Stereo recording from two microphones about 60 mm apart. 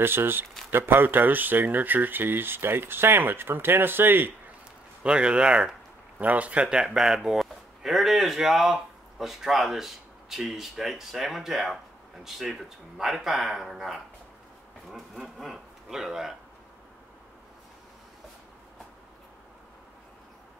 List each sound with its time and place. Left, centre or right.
0.0 s speech: right
5.0 s speech: centre
6.1 s speech: right; by 14.0 s centre
15.2 s speech: centre